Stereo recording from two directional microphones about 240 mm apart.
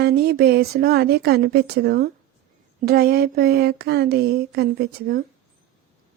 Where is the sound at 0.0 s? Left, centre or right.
Right.